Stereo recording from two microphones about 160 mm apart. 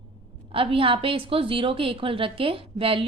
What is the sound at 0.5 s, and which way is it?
A woman's voice, 35° right (ahead or behind).